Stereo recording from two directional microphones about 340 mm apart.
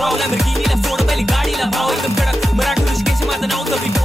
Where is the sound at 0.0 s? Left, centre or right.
Centre.